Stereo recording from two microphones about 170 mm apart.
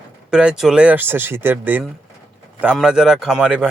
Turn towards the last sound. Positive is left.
turn(degrees=-5)  # may be behind; listen again after turning